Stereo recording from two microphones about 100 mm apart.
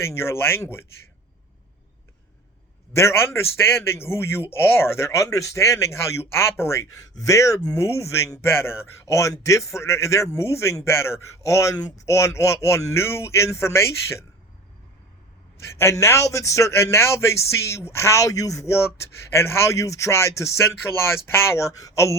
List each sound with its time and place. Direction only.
0.0 s speech: 25° left (ahead or behind)
2.9 s speech: 25° left (ahead or behind)
15.5 s speech: 25° left (ahead or behind)